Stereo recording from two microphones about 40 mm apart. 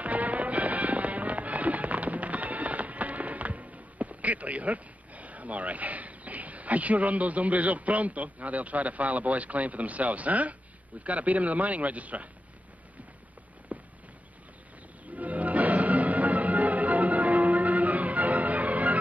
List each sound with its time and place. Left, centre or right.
0.0 s music: right
11.1 s a man's voice: right
13.7 s a sound: right
15.1 s music: right